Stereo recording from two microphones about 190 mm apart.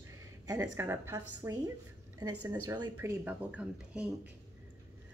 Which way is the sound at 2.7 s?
15° right (ahead or behind).